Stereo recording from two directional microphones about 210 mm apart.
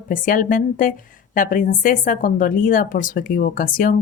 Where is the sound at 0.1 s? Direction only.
40° left (ahead or behind).